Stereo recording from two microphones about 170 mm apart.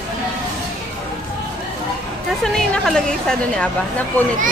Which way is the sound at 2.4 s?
5° left (ahead or behind).